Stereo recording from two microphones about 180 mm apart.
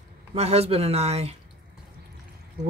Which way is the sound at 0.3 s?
35° right (ahead or behind).